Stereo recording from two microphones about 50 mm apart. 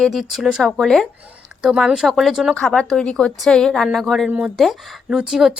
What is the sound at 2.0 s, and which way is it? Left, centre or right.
Speech, centre.